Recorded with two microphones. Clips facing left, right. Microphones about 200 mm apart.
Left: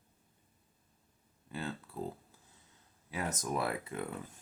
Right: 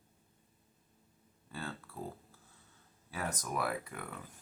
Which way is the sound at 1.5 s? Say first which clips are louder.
Left 3 dB; 20° left (ahead or behind).